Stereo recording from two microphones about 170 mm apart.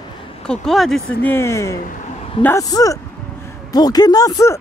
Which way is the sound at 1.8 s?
50° left (ahead or behind).